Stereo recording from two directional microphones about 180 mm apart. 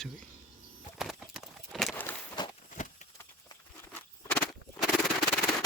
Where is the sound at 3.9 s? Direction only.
5° left (ahead or behind).